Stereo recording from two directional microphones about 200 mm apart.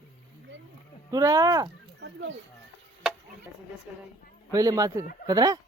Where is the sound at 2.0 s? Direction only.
65° right (ahead or behind).